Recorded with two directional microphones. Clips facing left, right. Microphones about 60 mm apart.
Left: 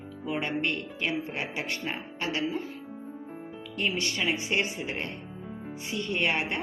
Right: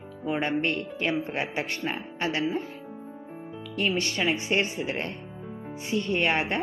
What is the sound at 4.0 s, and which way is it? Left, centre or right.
Speech, right.